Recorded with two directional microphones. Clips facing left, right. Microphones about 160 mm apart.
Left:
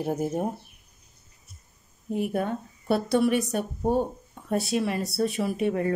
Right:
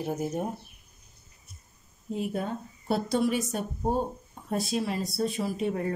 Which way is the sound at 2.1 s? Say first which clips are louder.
Left 4 dB; 60° left (ahead or behind).